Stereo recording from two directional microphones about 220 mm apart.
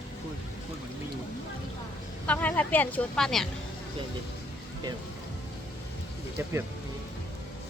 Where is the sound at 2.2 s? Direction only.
5° left (ahead or behind).